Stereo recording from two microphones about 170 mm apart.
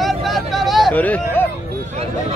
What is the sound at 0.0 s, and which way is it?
Vehicle, centre (ahead or behind).